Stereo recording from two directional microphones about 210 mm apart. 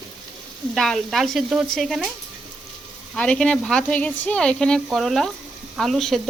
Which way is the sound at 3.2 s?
5° left (ahead or behind).